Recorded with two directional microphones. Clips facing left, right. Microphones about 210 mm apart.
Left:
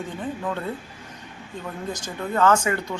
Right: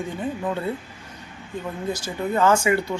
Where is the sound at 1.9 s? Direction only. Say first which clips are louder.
Even; 10° right (ahead or behind).